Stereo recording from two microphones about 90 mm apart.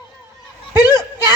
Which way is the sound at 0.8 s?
45° left (ahead or behind).